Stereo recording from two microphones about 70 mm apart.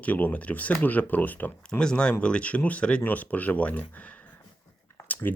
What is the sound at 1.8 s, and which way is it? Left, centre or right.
Speech, centre.